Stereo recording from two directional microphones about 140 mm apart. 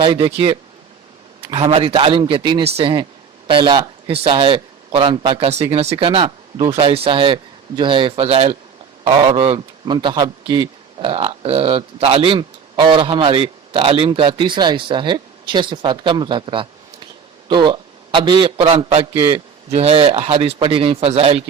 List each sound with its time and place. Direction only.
0.0 s a man's voice: 35° right (ahead or behind)
1.7 s a man's voice: 40° right (ahead or behind)